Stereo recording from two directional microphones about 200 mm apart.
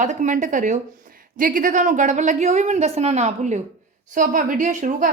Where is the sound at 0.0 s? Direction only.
40° right (ahead or behind).